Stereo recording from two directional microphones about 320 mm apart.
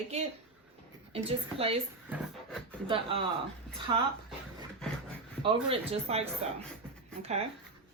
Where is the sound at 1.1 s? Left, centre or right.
Centre.